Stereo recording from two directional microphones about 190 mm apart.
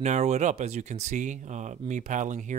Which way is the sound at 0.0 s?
40° right (ahead or behind).